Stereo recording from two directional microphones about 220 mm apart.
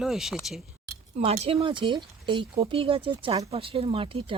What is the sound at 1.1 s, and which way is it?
Speech, 30° right (ahead or behind).